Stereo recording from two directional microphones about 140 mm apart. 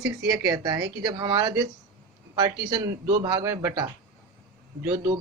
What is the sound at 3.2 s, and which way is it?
Speech, 30° right (ahead or behind).